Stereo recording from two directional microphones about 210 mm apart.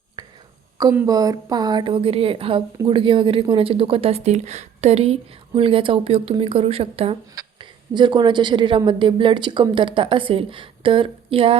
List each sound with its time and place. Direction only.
0.2 s whispering: 20° right (ahead or behind)
0.8 s speech: 15° right (ahead or behind)